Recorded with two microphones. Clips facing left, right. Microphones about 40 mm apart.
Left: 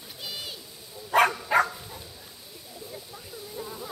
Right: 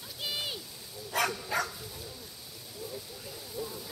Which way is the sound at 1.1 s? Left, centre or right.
Left.